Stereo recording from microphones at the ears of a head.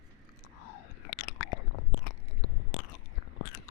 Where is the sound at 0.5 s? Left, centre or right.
Left.